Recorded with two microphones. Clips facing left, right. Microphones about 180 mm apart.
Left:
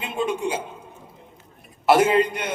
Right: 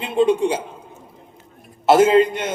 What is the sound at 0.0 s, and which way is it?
Speech, 30° right (ahead or behind).